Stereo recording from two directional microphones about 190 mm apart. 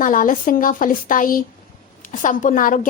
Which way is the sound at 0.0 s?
45° left (ahead or behind).